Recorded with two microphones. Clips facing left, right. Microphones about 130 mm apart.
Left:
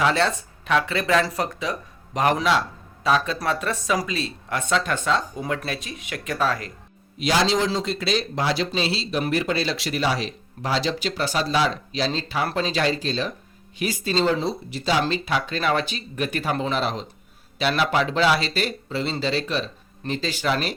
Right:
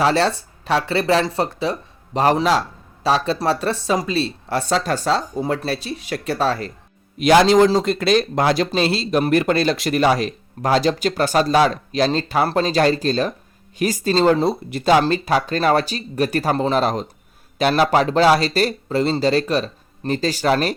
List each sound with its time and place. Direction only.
0.0 s a man's voice: 35° right (ahead or behind)
7.2 s speech: 55° right (ahead or behind)
15.0 s a man's voice: 40° right (ahead or behind)